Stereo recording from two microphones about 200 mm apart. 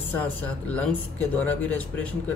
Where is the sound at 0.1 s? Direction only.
10° left (ahead or behind).